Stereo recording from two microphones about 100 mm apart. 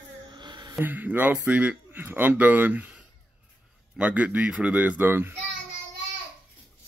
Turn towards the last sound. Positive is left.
turn(degrees=-20)  # may be behind; listen again after turning